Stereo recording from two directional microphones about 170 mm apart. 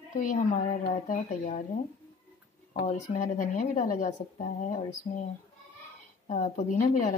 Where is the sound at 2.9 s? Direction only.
45° left (ahead or behind).